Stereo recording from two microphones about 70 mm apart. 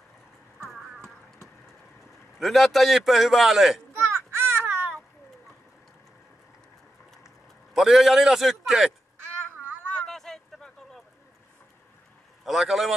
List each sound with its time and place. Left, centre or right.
0.7 s clip-clop: centre
2.3 s a man's voice: centre
3.9 s a sound: right
7.7 s a man's voice: centre
9.9 s a sound: centre
12.4 s a man's voice: centre